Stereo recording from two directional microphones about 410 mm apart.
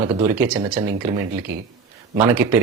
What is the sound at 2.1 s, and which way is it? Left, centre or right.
Speech, centre.